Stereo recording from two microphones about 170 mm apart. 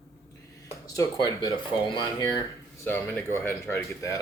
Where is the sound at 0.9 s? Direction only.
20° left (ahead or behind).